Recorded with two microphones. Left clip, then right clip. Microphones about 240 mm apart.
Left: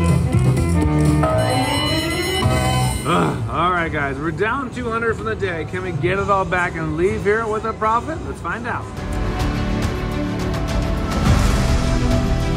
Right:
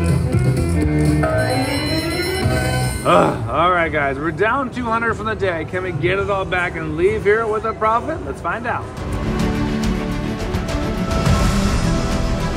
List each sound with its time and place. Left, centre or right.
0.0 s music: centre
3.1 s speech: centre
4.9 s speech: centre
6.0 s speech: centre